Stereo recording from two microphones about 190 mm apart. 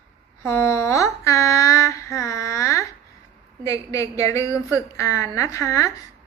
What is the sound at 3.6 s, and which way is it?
A woman's voice, 15° left (ahead or behind).